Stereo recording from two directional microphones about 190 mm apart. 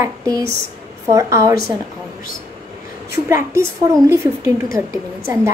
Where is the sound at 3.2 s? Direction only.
15° right (ahead or behind).